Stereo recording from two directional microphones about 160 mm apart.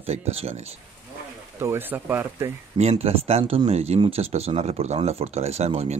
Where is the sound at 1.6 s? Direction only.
15° right (ahead or behind).